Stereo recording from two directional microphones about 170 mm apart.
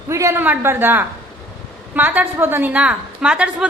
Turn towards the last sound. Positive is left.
turn(degrees=-5)  # may be behind; listen again after turning